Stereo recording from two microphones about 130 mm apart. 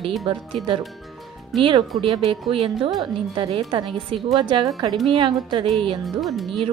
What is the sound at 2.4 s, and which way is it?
A woman's voice, 45° right (ahead or behind).